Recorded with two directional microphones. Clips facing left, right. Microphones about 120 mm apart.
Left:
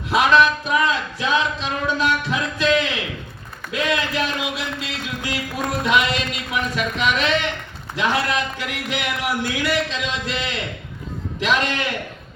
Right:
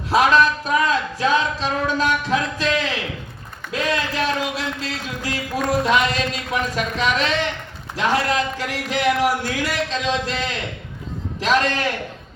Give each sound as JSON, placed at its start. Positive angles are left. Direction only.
{"t": 0.1, "sound": "speech", "side_deg": -40}
{"t": 3.7, "sound": "a sound", "side_deg": -40}
{"t": 5.8, "sound": "speech", "side_deg": -40}